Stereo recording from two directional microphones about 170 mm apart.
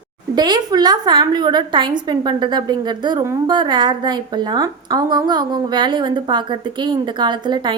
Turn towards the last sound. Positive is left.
turn(degrees=-25)  # may be behind; listen again after turning